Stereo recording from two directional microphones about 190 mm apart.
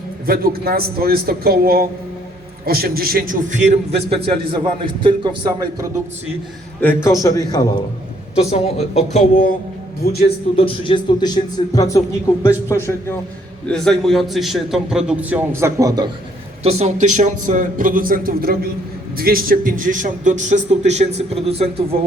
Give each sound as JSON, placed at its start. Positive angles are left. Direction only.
{"t": 0.3, "sound": "speech", "side_deg": -50}
{"t": 5.0, "sound": "speech", "side_deg": -25}
{"t": 6.8, "sound": "a man's voice", "side_deg": 15}
{"t": 8.4, "sound": "speech", "side_deg": 35}
{"t": 10.1, "sound": "a man's voice", "side_deg": 55}
{"t": 10.5, "sound": "a man's voice", "side_deg": 25}
{"t": 16.6, "sound": "a man's voice", "side_deg": -35}